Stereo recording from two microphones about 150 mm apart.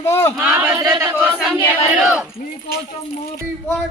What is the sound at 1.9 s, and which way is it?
Speech, 10° right (ahead or behind).